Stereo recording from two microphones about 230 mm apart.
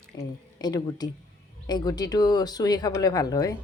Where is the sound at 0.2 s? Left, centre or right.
Centre.